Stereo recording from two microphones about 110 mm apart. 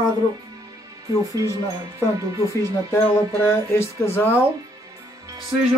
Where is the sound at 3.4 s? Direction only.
20° left (ahead or behind).